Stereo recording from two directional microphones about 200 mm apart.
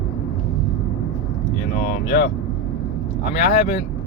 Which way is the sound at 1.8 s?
50° left (ahead or behind).